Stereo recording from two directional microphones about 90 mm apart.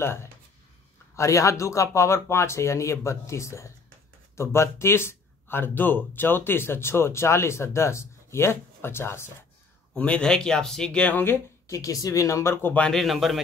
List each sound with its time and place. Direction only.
0.0 s speech: 30° left (ahead or behind)
9.9 s speech: 15° left (ahead or behind)
11.6 s speech: 35° left (ahead or behind)
12.6 s speech: 15° left (ahead or behind)
12.9 s a man's voice: centre (ahead or behind)